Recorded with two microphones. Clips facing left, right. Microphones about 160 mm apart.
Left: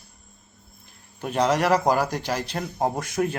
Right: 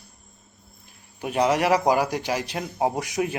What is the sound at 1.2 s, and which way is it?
A man's voice, 10° right (ahead or behind).